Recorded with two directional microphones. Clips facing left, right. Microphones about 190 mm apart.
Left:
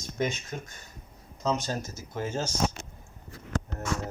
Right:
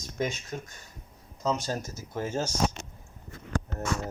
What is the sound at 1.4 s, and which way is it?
Speech, 10° right (ahead or behind).